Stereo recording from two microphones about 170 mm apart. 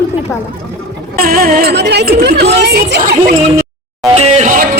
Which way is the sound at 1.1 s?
60° right (ahead or behind).